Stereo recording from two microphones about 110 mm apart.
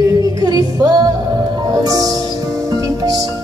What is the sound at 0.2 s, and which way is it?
Music, 35° right (ahead or behind).